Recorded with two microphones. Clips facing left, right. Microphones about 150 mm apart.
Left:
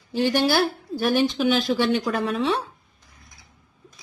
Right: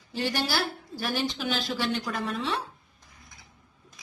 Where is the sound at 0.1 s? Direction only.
60° left (ahead or behind).